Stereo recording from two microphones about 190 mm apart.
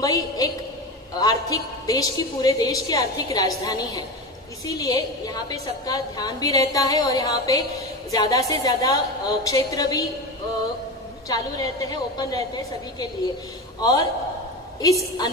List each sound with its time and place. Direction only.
0.0 s a woman's voice: 20° left (ahead or behind)
11.2 s a woman's voice: 20° left (ahead or behind)